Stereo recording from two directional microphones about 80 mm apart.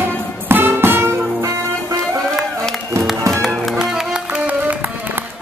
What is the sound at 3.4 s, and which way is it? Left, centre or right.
Music, centre.